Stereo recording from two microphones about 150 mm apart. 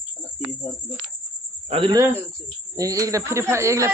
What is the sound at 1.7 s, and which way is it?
Speech, 35° right (ahead or behind).